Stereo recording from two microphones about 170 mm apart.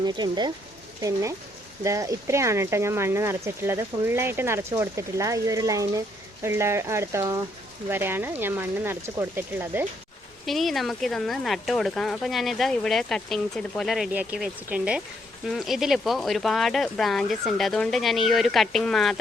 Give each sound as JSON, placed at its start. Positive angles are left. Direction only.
{"t": 0.0, "sound": "speech", "side_deg": -25}
{"t": 10.4, "sound": "speech", "side_deg": 0}